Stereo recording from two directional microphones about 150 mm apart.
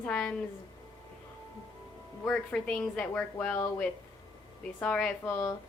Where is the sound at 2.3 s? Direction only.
5° left (ahead or behind).